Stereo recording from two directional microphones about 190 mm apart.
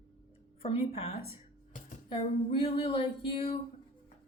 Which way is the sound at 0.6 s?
30° left (ahead or behind).